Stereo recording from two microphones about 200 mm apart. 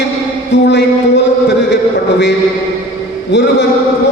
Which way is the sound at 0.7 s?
60° left (ahead or behind).